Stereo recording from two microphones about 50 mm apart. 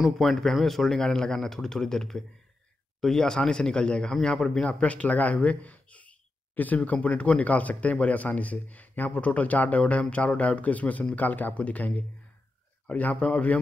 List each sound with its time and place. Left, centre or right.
0.2 s speech: centre
4.6 s speech: left
12.9 s speech: left